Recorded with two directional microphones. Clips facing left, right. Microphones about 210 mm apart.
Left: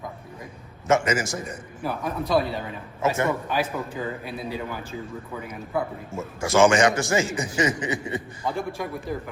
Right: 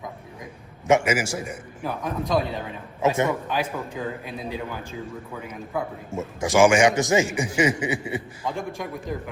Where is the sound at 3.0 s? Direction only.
15° right (ahead or behind).